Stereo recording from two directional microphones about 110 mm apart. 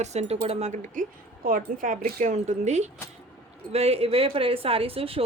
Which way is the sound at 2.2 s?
90° right.